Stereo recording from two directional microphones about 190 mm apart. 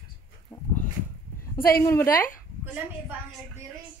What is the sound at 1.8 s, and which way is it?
Speech, 15° left (ahead or behind).